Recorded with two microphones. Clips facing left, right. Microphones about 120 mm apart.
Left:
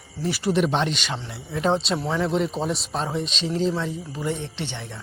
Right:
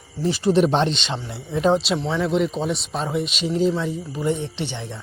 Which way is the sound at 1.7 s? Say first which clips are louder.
Right 2 dB; 5° right (ahead or behind).